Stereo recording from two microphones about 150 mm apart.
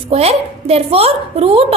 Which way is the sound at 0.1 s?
40° right (ahead or behind).